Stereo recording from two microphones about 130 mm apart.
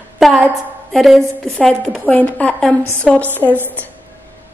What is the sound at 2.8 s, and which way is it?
Speech, 20° right (ahead or behind).